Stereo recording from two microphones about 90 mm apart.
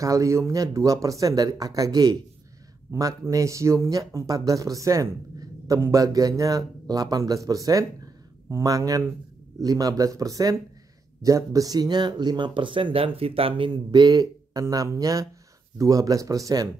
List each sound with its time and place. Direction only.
0.0 s speech: 35° right (ahead or behind); by 13.7 s 90° right
13.7 s speech: 55° right (ahead or behind)